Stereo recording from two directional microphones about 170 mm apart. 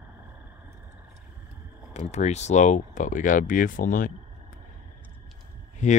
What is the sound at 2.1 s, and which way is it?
Speech, 40° left (ahead or behind).